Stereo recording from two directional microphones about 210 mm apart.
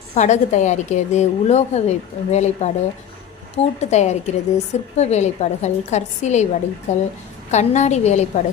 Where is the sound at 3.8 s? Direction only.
35° left (ahead or behind).